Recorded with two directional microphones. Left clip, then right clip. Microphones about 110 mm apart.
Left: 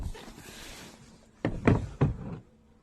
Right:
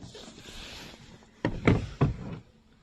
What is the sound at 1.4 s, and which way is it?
Knock, 5° right (ahead or behind).